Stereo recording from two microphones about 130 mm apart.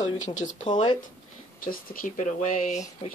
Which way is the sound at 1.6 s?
90° left.